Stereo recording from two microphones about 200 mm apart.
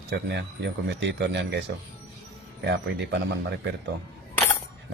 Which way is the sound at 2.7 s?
60° right (ahead or behind).